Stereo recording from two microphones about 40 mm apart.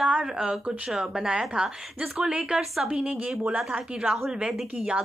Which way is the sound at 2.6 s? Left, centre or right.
Centre.